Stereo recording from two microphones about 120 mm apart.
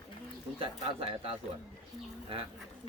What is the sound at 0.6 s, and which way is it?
Speech, 50° right (ahead or behind).